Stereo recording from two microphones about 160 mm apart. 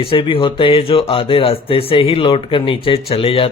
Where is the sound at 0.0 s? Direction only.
35° left (ahead or behind).